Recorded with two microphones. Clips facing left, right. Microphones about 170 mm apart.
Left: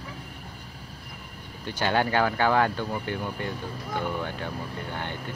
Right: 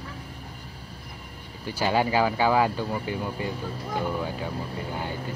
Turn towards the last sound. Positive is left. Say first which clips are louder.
# right 2 dB
turn(degrees=-5)  # may be behind; listen again after turning